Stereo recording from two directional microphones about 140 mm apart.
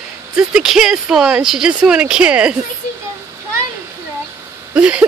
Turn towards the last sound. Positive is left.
turn(degrees=-10)  # may be behind; listen again after turning